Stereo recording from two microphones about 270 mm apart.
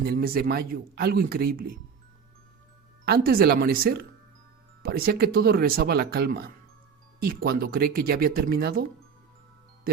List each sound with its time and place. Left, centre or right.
0.0 s speech: right
3.1 s speech: right